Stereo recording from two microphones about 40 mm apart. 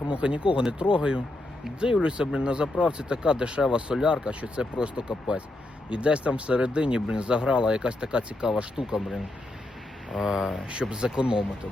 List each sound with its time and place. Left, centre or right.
0.1 s speech: right
10.2 s speech: centre
10.7 s speech: right